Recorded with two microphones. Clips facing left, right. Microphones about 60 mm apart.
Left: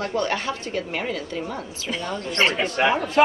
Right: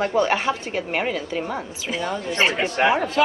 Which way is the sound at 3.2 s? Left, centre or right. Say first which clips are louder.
Left 4 dB; left.